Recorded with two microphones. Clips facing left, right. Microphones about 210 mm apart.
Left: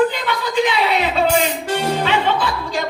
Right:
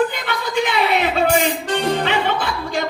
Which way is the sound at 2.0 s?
55° right (ahead or behind).